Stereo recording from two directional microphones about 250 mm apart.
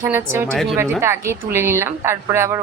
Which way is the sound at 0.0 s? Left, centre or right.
Centre.